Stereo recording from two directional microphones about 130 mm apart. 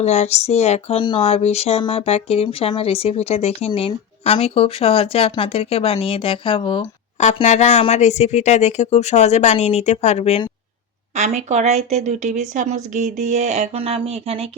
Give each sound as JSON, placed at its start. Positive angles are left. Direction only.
{"t": 0.0, "sound": "speech", "side_deg": 60}
{"t": 1.0, "sound": "speech", "side_deg": 35}
{"t": 1.3, "sound": "speech", "side_deg": 50}
{"t": 7.4, "sound": "speech", "side_deg": 60}
{"t": 11.1, "sound": "speech", "side_deg": -65}